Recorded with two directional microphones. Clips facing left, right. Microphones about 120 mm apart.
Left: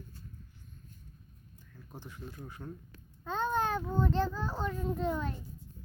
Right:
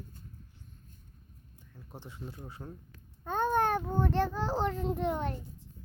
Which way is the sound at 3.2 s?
55° right (ahead or behind).